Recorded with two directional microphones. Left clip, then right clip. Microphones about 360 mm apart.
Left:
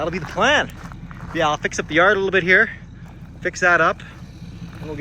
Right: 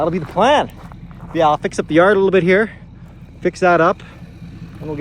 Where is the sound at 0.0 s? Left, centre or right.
Centre.